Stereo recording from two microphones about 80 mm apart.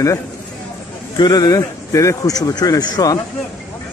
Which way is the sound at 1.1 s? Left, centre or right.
Left.